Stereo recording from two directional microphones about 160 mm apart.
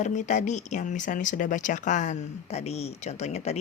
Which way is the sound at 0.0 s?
50° left (ahead or behind).